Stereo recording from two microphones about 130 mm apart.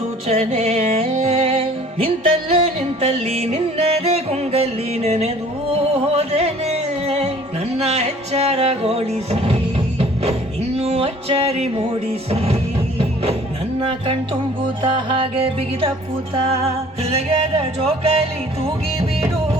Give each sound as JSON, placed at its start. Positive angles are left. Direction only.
{"t": 0.3, "sound": "music", "side_deg": -55}
{"t": 14.8, "sound": "music", "side_deg": -40}
{"t": 17.6, "sound": "music", "side_deg": -50}